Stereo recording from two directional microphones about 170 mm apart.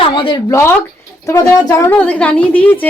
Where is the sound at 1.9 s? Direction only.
5° left (ahead or behind).